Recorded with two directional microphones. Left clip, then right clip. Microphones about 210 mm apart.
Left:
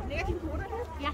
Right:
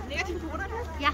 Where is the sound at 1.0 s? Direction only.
40° right (ahead or behind).